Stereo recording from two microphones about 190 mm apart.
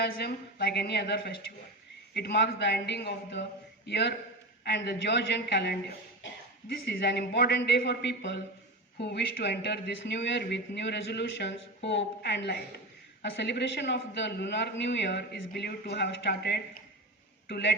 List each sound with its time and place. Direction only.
0.0 s speech: 55° left (ahead or behind)
6.2 s a sound: 75° left (ahead or behind)
6.8 s speech: 60° left (ahead or behind)